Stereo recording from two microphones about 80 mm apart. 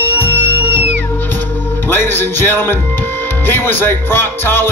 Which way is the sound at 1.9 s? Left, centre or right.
Left.